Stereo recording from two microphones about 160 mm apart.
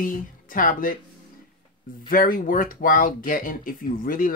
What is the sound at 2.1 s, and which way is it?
Speech, 60° left (ahead or behind).